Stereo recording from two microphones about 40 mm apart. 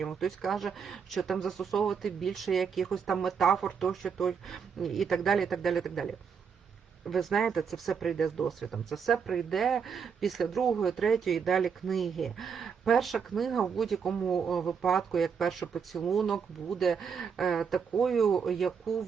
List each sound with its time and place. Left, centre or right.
0.0 s speech: centre